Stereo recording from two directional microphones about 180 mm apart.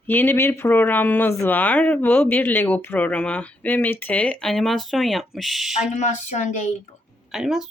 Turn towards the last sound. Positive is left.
turn(degrees=0)  # may be behind; listen again after turning